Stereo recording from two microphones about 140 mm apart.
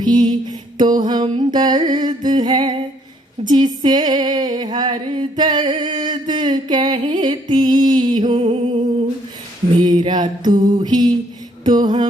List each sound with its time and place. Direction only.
0.0 s music: 30° right (ahead or behind)
8.3 s music: 50° right (ahead or behind)
9.8 s music: 30° right (ahead or behind)
11.6 s mantra: 30° right (ahead or behind)